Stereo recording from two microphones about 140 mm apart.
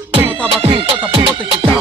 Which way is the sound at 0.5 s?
40° right (ahead or behind).